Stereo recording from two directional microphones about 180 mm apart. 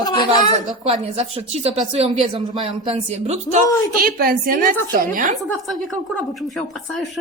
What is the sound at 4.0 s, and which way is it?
Speech, 55° right (ahead or behind).